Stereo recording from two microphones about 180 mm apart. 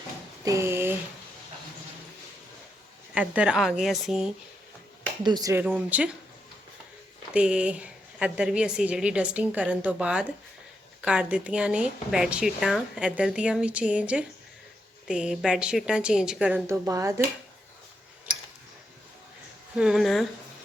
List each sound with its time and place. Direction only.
0.4 s a woman's voice: 15° right (ahead or behind)
3.2 s a woman's voice: 5° right (ahead or behind)
5.2 s a woman's voice: 20° right (ahead or behind)
7.3 s a woman's voice: 5° right (ahead or behind)
16.6 s a woman's voice: 15° right (ahead or behind)
19.7 s a woman's voice: 5° right (ahead or behind)